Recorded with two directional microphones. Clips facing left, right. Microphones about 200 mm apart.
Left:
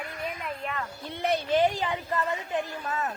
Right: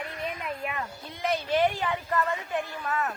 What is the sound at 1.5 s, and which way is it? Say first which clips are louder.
A woman's voice: even; 20° left (ahead or behind).